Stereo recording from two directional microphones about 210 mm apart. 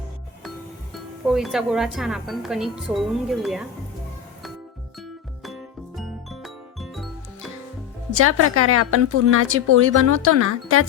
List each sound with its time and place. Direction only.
0.9 s speech: centre (ahead or behind)
6.0 s music: centre (ahead or behind)
8.1 s a woman's voice: 90° right